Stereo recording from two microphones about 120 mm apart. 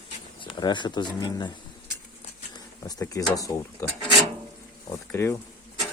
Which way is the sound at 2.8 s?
30° left (ahead or behind).